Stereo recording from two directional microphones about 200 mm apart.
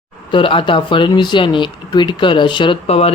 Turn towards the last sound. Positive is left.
turn(degrees=30)  # may be behind; listen again after turning